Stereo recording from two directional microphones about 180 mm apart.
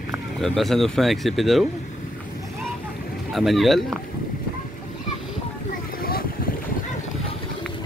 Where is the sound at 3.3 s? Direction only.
Centre (ahead or behind).